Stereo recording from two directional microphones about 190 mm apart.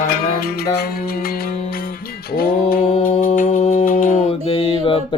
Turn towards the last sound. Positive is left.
turn(degrees=25)  # may be behind; listen again after turning